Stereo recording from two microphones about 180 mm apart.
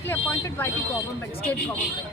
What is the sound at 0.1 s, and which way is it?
Speech, 10° left (ahead or behind).